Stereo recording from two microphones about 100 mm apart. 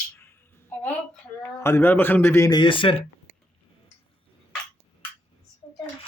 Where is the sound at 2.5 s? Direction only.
55° left (ahead or behind).